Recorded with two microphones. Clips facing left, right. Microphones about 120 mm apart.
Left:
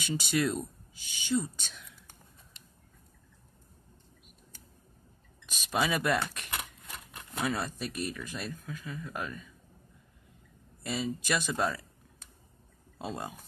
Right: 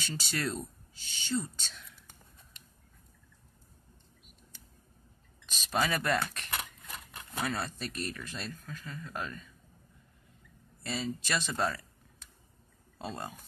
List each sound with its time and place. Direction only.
0.0 s speech: 15° left (ahead or behind)
5.5 s speech: 10° left (ahead or behind)
10.8 s speech: 10° left (ahead or behind)
13.0 s speech: 10° left (ahead or behind)